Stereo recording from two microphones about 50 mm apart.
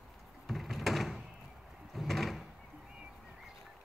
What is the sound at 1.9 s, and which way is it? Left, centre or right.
Drawer open or close, centre.